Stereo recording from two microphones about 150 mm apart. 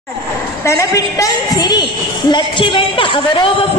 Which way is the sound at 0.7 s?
20° left (ahead or behind).